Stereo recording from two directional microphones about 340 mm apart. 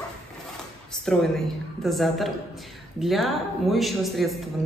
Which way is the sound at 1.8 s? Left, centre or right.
Centre.